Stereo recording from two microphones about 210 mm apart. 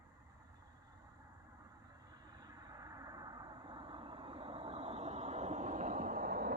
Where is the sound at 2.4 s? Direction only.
20° right (ahead or behind).